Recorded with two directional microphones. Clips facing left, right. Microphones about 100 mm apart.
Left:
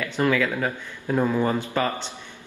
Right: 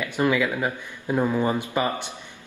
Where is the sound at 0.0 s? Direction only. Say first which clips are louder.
Even; 15° right (ahead or behind).